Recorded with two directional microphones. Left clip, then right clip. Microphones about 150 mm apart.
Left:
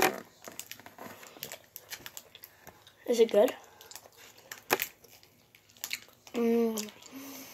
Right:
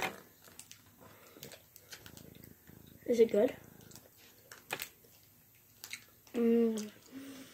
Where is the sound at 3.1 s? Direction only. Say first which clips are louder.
Left 4 dB; 25° right (ahead or behind).